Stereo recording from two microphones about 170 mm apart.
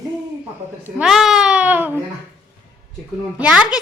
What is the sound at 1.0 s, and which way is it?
A woman's voice, centre (ahead or behind).